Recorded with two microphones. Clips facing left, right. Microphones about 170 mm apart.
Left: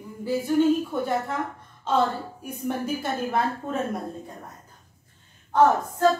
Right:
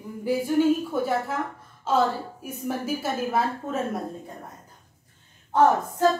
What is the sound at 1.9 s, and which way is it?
A woman's voice, 5° right (ahead or behind).